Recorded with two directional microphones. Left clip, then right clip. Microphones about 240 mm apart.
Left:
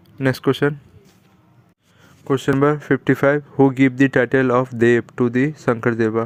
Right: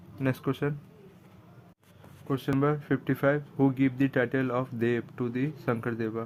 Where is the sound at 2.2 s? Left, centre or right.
Left.